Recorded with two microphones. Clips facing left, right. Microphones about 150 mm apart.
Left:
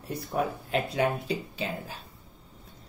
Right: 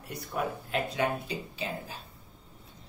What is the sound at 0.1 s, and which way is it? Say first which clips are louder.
Speech: left 4 dB; 35° left (ahead or behind).